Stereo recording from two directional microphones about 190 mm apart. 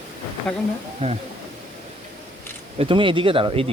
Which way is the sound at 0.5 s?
5° left (ahead or behind).